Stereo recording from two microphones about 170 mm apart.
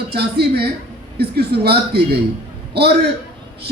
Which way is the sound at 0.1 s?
70° right (ahead or behind).